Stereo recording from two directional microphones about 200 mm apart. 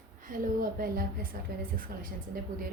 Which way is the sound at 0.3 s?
40° right (ahead or behind).